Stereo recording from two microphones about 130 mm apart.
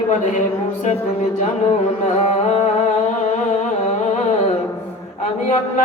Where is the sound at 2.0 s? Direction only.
65° left (ahead or behind).